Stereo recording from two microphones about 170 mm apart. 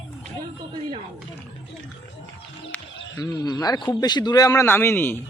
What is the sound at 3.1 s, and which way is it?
Speech, 20° left (ahead or behind).